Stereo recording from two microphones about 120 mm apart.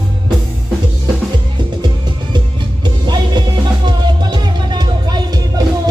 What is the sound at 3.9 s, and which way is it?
Music, 35° right (ahead or behind).